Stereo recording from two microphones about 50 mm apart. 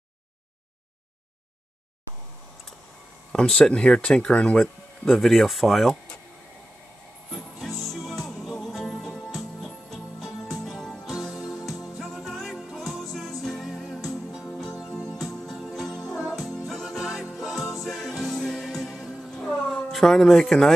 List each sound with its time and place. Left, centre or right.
3.3 s speech: centre
5.0 s speech: centre
7.5 s music: centre
10.5 s music: centre
14.8 s music: centre
15.0 s music: centre
19.5 s a sound: centre
19.9 s speech: centre